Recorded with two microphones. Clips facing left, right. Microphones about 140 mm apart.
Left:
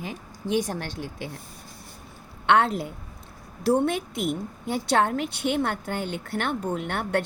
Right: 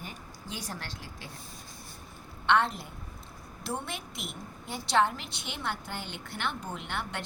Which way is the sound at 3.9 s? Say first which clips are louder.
Left 14 dB; 55° left (ahead or behind).